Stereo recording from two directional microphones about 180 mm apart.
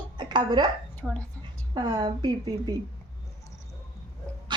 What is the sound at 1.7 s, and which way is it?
Speech, 25° right (ahead or behind).